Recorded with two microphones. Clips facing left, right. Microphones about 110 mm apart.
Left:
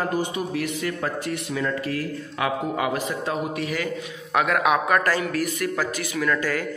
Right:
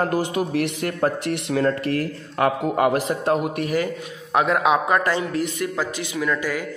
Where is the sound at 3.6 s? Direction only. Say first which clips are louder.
Right 5 dB; 45° right (ahead or behind).